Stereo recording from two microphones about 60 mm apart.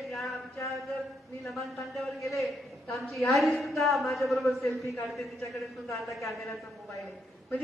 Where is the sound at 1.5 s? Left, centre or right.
Centre.